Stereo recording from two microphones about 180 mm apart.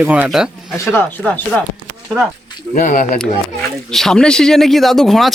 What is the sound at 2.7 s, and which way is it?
Speech, 50° left (ahead or behind).